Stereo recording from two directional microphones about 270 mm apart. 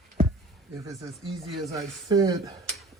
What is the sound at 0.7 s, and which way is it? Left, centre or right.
A woman's voice, centre.